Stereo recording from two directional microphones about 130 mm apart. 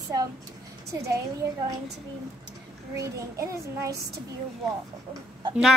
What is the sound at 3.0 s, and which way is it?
A child's voice, 25° right (ahead or behind).